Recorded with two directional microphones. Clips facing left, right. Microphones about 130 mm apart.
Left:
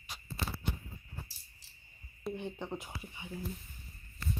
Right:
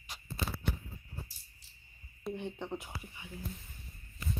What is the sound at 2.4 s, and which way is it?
Speech, 10° left (ahead or behind).